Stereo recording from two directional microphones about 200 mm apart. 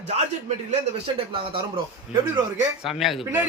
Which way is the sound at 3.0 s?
Centre (ahead or behind).